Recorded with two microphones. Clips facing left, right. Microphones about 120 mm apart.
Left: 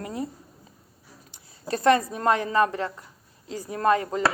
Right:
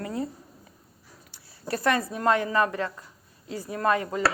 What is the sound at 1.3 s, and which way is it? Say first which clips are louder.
A woman's voice: left 1 dB; 25° left (ahead or behind).